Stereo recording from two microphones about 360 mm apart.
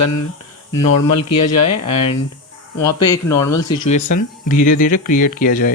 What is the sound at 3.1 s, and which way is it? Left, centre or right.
Speech, centre.